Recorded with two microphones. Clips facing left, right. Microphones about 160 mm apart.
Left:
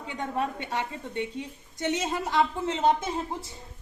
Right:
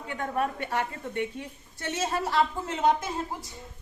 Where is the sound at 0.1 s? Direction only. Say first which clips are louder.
Right 1 dB; 20° left (ahead or behind).